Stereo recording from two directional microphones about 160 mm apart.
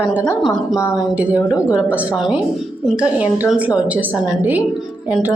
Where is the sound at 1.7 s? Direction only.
10° right (ahead or behind).